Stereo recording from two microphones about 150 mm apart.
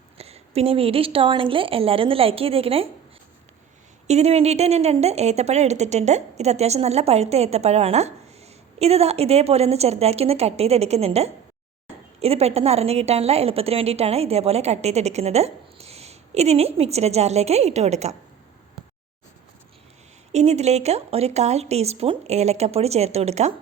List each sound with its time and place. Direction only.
0.2 s a woman's voice: 45° right (ahead or behind)
4.0 s a woman's voice: 45° right (ahead or behind)
20.3 s a woman's voice: 45° right (ahead or behind)